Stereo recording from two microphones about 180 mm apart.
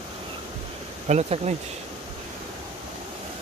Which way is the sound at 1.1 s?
40° right (ahead or behind).